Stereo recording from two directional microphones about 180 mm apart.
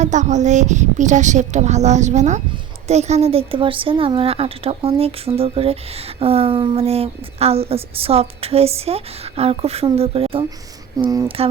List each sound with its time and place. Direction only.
0.0 s a woman's voice: 40° right (ahead or behind)
10.9 s speech: 20° right (ahead or behind)